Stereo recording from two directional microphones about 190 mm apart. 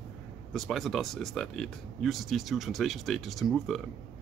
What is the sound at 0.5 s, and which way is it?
Speech, centre (ahead or behind).